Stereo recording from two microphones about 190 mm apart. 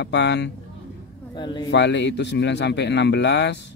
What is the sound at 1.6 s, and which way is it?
Speech, 70° left (ahead or behind).